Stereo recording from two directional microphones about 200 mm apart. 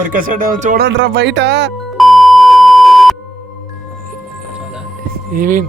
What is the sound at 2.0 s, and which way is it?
Beep, centre (ahead or behind).